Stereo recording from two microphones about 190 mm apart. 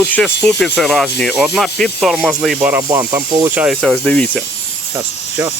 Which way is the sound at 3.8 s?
5° left (ahead or behind).